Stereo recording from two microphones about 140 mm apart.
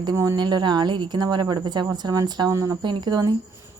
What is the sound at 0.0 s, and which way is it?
A woman's voice, 25° right (ahead or behind).